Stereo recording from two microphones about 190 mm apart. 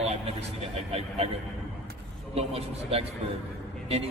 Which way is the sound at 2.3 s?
30° right (ahead or behind).